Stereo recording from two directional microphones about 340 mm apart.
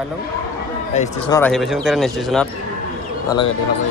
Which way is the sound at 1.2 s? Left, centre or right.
Centre.